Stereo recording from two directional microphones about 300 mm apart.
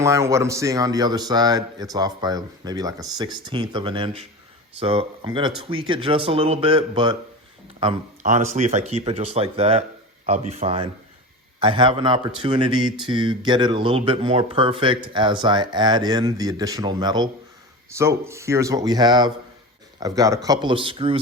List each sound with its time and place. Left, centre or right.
0.0 s speech: centre